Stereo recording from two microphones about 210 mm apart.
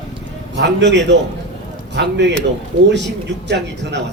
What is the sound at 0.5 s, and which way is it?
A man's voice, 55° right (ahead or behind).